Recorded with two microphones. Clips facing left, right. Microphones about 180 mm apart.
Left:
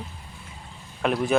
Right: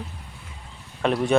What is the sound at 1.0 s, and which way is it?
Speech, centre (ahead or behind).